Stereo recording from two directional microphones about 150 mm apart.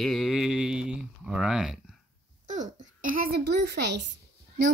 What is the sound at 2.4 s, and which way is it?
Babbling, 55° right (ahead or behind).